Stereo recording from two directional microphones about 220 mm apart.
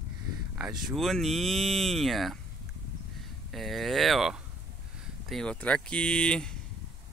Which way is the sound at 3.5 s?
Centre (ahead or behind).